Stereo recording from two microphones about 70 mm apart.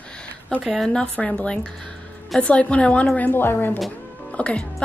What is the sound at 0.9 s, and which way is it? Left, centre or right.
A woman's voice, centre.